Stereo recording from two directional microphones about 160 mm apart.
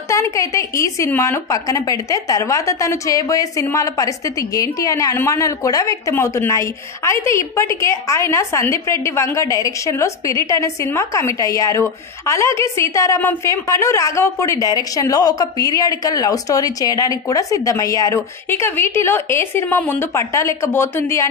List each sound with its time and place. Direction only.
0.1 s a woman's voice: 20° left (ahead or behind)